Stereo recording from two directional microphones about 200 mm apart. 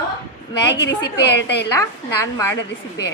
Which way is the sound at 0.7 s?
60° left (ahead or behind).